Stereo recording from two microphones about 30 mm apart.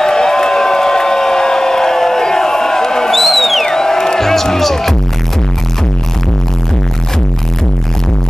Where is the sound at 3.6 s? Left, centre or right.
Centre.